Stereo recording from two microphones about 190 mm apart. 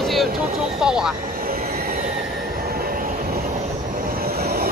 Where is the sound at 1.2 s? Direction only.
50° right (ahead or behind).